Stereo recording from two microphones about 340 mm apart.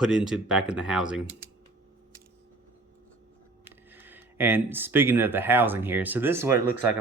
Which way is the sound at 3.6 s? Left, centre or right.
Centre.